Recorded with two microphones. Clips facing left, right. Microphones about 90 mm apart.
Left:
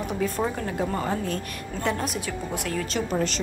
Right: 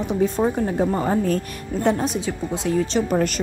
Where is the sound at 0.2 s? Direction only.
30° right (ahead or behind).